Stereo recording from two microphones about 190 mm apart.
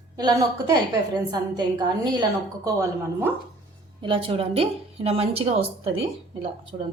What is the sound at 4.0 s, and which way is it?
A woman's voice, 25° right (ahead or behind).